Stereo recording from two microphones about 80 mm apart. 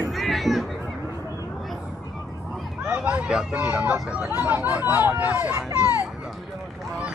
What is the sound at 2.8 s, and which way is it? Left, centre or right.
Speech, centre.